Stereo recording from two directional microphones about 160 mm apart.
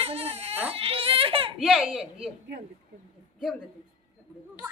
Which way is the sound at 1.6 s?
5° right (ahead or behind).